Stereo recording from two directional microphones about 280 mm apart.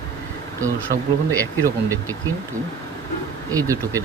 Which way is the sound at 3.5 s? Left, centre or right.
Centre.